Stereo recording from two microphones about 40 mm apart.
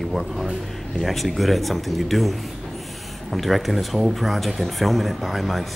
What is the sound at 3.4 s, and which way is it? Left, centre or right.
Speech, centre.